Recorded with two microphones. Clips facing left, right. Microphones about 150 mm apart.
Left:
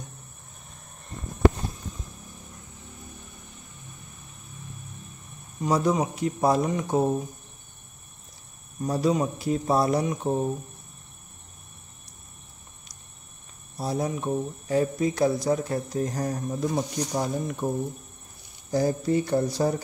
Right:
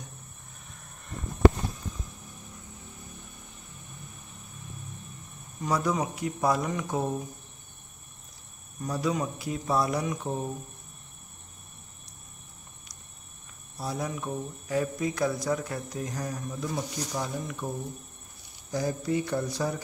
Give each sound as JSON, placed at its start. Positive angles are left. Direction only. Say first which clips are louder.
{"t": 5.6, "sound": "speech", "louder": "left 4 dB", "side_deg": 25}
{"t": 8.8, "sound": "speech", "louder": "left 5 dB", "side_deg": 30}
{"t": 13.7, "sound": "speech", "louder": "left 5 dB", "side_deg": 30}